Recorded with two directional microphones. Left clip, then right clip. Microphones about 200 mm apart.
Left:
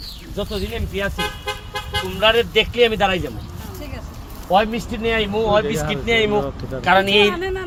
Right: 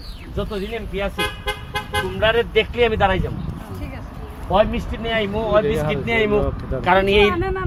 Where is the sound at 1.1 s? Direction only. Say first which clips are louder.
Right 1 dB; 35° right (ahead or behind).